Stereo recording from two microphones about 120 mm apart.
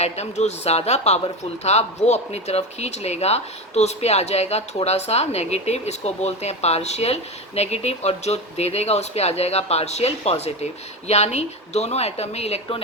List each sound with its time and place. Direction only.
0.0 s speech: 65° left (ahead or behind)